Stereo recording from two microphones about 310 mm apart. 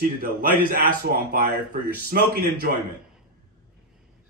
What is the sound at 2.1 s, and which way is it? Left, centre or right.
Speech, right.